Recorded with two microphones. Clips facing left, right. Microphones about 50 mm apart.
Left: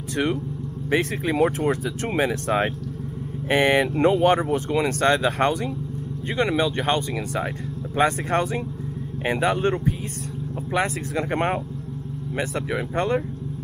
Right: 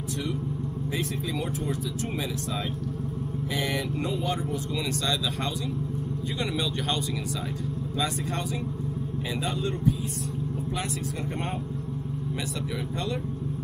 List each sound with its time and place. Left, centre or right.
0.9 s speech: left
6.3 s speech: left
8.0 s speech: left
11.1 s speech: left
12.4 s speech: left